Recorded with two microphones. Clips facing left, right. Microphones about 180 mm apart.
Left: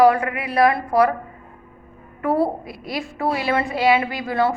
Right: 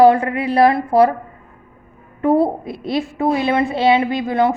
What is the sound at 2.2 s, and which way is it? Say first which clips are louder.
A woman's voice: right 5 dB; 25° right (ahead or behind).